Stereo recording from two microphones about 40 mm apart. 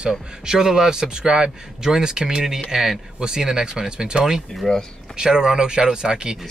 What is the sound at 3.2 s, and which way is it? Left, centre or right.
Speech, centre.